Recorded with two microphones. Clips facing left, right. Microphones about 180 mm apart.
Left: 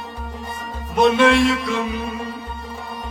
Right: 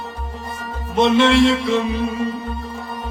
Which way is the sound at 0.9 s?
25° right (ahead or behind).